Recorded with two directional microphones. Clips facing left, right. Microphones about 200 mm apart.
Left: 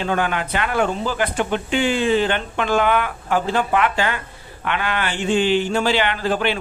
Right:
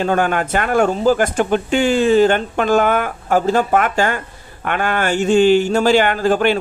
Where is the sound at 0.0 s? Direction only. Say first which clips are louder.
Right 5 dB; 45° right (ahead or behind).